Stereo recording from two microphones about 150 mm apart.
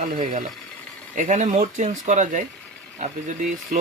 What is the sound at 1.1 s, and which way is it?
Speech, 55° right (ahead or behind).